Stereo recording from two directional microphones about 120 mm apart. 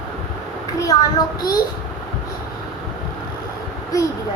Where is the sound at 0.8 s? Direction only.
30° left (ahead or behind).